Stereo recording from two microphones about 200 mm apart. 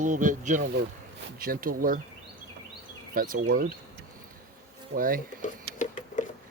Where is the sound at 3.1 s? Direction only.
45° right (ahead or behind).